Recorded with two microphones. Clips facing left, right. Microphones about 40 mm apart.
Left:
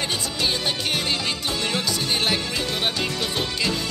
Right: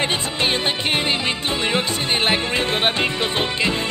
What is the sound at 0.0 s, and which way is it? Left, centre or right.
Music, right.